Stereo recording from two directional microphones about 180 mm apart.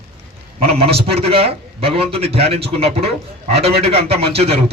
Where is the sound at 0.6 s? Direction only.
35° right (ahead or behind).